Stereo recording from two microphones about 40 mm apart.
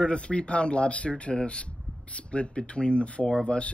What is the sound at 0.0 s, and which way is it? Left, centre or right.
Speech, left.